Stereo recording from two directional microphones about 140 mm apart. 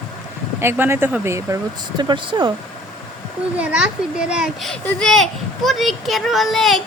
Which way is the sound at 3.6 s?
5° right (ahead or behind).